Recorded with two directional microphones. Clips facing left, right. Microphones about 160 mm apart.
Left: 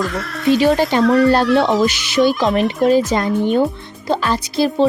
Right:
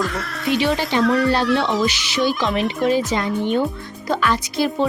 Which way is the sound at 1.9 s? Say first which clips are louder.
Left 5 dB; 50° left (ahead or behind).